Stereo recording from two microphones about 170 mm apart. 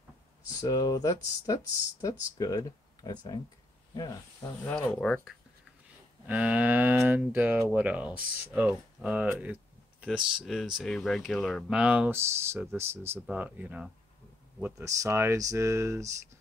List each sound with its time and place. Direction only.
0.6 s speech: 20° left (ahead or behind)
4.6 s speech: 5° left (ahead or behind)
6.2 s speech: 10° right (ahead or behind)